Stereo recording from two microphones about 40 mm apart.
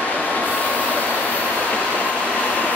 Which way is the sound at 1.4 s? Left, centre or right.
Left.